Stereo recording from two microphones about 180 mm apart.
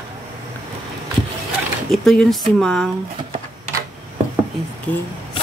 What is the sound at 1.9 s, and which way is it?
Speech, centre (ahead or behind).